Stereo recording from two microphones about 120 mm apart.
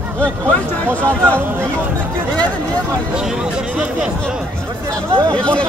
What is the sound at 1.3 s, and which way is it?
Speech, 15° right (ahead or behind).